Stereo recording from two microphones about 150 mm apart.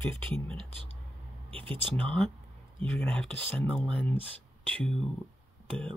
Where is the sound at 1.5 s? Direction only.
35° right (ahead or behind).